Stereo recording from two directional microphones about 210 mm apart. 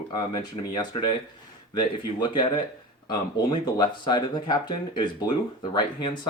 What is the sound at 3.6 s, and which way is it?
Speech, 20° left (ahead or behind).